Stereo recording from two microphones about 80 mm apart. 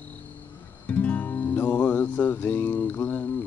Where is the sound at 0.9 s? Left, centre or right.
Centre.